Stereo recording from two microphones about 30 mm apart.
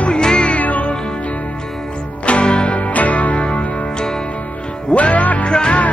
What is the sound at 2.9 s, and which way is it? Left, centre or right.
Music, left.